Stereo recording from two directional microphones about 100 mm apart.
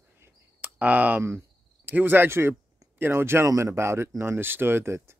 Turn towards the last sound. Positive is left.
turn(degrees=-25)  # may be behind; listen again after turning